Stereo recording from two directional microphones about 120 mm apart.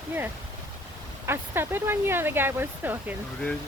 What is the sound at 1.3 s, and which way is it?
Speech, 20° right (ahead or behind).